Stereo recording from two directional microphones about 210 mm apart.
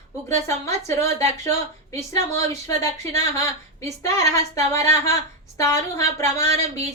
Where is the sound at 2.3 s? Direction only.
15° left (ahead or behind).